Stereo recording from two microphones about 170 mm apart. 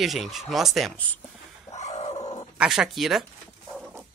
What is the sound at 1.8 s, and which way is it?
Dog, 40° left (ahead or behind).